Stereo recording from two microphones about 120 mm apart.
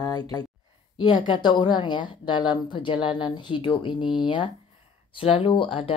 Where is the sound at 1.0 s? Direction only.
40° left (ahead or behind).